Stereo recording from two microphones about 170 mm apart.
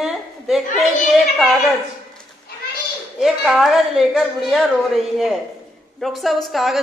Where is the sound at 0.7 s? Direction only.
Centre (ahead or behind).